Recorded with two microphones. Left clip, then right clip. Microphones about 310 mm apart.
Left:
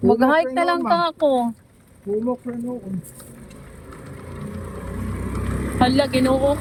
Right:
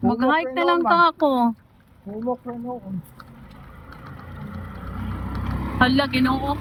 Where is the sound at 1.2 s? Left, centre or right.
Right.